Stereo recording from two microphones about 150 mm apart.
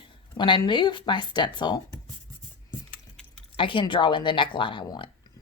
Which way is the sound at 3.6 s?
35° left (ahead or behind).